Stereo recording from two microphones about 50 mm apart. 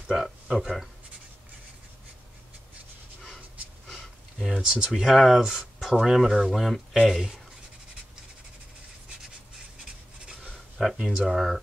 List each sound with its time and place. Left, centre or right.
0.1 s speech: centre
4.6 s speech: centre
10.8 s speech: centre